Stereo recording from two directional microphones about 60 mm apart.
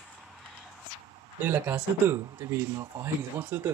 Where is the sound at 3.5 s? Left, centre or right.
Right.